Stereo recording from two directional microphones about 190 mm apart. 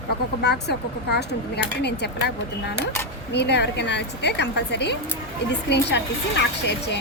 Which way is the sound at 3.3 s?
60° left (ahead or behind).